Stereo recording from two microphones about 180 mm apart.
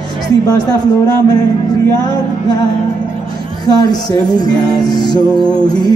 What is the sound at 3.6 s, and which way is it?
Music, 20° left (ahead or behind).